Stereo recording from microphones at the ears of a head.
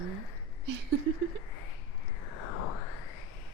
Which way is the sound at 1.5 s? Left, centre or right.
Left.